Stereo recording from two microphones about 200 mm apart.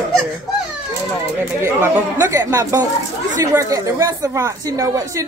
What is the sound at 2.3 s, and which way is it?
Speech, 15° right (ahead or behind).